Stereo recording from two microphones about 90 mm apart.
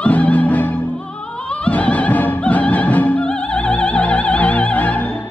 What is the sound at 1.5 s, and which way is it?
Opera, 15° left (ahead or behind).